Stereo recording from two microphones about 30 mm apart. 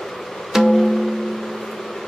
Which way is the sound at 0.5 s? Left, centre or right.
Centre.